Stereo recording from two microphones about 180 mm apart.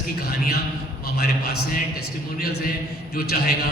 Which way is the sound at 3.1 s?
55° left (ahead or behind).